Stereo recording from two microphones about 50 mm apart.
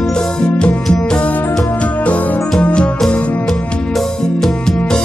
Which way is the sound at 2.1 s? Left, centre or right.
Left.